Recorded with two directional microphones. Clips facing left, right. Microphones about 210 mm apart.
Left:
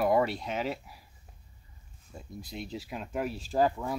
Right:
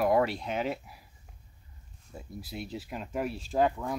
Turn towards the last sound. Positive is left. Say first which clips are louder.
# even
turn(degrees=0)  # may be behind; listen again after turning